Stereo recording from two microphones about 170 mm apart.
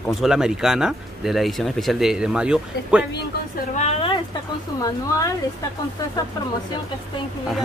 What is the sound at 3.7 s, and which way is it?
Speech, 35° left (ahead or behind).